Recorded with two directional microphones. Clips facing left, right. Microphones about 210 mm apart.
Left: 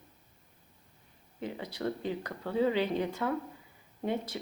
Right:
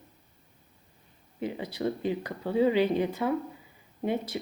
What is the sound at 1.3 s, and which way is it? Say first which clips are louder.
A woman's voice: right 5 dB; 10° right (ahead or behind).